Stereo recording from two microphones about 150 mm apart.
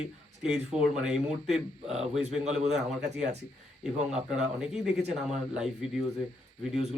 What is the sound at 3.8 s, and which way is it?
Speech, 5° right (ahead or behind).